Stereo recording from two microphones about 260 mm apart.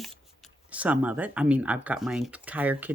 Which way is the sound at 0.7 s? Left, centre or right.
Centre.